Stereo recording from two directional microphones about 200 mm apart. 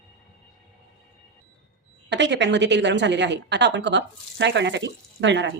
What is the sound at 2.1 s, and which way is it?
A woman's voice, 60° right (ahead or behind).